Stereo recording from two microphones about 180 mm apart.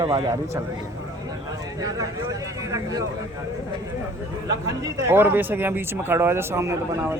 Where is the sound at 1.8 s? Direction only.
20° right (ahead or behind).